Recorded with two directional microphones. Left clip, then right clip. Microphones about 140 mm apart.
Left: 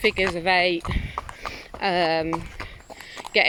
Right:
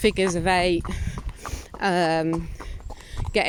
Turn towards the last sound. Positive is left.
turn(degrees=-45)  # may be behind; listen again after turning